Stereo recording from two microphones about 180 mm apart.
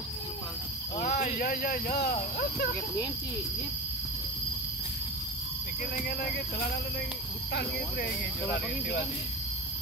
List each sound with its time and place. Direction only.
1.0 s speech: 50° left (ahead or behind)
7.5 s speech: 65° left (ahead or behind)